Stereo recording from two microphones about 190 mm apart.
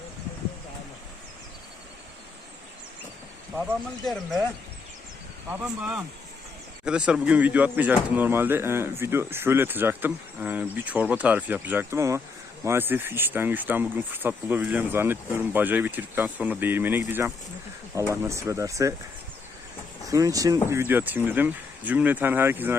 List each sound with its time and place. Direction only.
5.5 s speech: 10° right (ahead or behind)
20.1 s speech: 20° right (ahead or behind)